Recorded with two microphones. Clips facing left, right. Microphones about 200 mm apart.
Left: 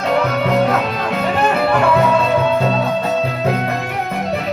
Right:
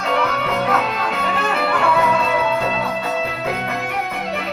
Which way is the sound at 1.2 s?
40° left (ahead or behind).